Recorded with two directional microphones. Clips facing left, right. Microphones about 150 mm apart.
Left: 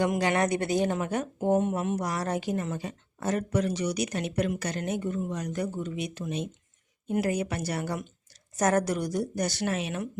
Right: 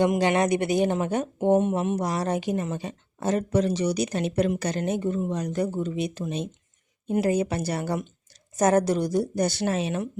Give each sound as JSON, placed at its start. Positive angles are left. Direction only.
{"t": 0.0, "sound": "speech", "side_deg": -25}